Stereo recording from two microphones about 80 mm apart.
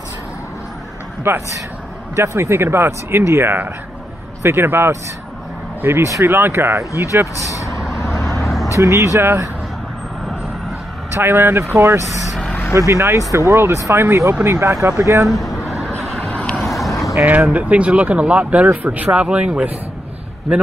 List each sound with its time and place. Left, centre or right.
1.3 s speech: right
7.3 s speech: left
8.0 s vehicle: left
8.7 s speech: right
11.1 s speech: right
16.0 s vehicle: centre
16.3 s vehicle: centre
16.5 s vehicle: centre
17.2 s speech: centre